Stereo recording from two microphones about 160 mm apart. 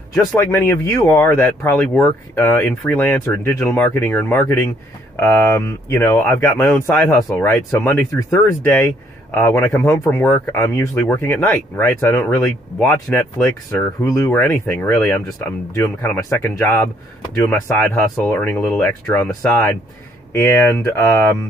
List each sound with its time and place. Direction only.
0.1 s speech: 10° left (ahead or behind)
13.7 s speech: 20° left (ahead or behind)
14.3 s speech: 10° left (ahead or behind)